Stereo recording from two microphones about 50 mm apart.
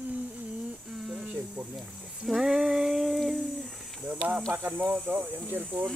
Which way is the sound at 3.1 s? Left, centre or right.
Centre.